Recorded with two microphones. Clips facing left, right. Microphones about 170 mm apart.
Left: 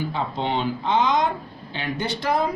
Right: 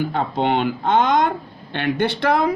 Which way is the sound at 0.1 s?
60° right (ahead or behind).